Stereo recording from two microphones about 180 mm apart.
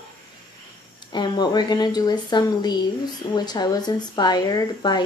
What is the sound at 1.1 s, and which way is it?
Speech, 25° left (ahead or behind).